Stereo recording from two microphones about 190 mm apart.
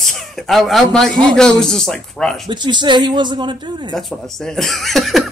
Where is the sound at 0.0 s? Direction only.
Centre (ahead or behind).